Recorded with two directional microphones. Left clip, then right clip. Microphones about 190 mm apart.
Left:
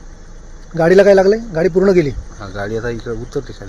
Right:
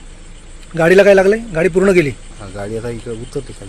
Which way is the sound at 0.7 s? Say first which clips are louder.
Even; 15° right (ahead or behind).